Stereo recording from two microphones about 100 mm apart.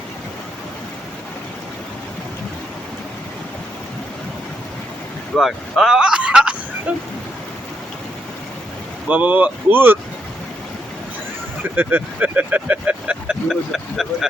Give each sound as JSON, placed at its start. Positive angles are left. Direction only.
{"t": 5.4, "sound": "a sound", "side_deg": 0}
{"t": 9.0, "sound": "speech", "side_deg": -15}
{"t": 11.8, "sound": "speech", "side_deg": -15}